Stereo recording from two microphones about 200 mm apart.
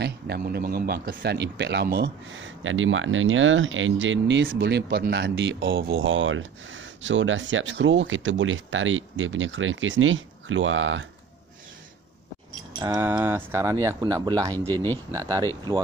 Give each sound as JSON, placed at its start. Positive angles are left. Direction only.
{"t": 0.0, "sound": "speech", "side_deg": -50}
{"t": 4.5, "sound": "speech", "side_deg": -55}
{"t": 12.8, "sound": "speech", "side_deg": -15}